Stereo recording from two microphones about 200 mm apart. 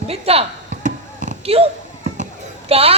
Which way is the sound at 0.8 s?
40° right (ahead or behind).